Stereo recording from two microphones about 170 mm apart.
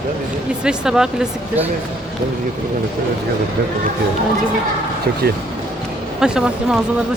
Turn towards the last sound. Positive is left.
turn(degrees=-5)  # may be behind; listen again after turning